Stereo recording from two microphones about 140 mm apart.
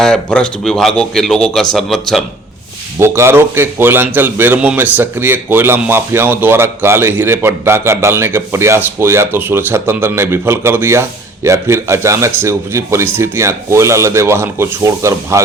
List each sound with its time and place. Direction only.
0.0 s speech: 5° left (ahead or behind)
3.0 s a man's voice: 20° right (ahead or behind)